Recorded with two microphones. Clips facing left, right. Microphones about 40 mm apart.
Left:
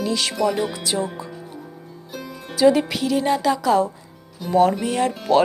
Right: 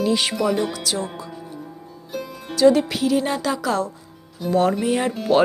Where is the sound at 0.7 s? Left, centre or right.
Left.